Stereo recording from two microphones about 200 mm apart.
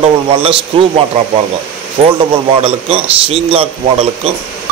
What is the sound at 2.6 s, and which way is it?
Speech, 25° right (ahead or behind).